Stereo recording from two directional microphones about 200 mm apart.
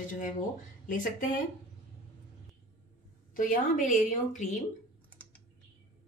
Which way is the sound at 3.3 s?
40° left (ahead or behind).